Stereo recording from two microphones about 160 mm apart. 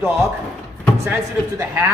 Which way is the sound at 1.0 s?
15° right (ahead or behind).